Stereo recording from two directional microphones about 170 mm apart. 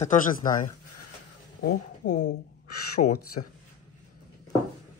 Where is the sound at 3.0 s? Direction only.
70° left (ahead or behind).